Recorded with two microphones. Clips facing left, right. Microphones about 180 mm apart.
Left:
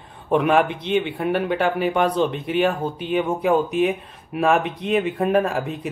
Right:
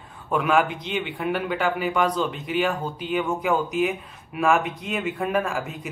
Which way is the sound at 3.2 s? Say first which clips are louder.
Left 4 dB; 30° left (ahead or behind).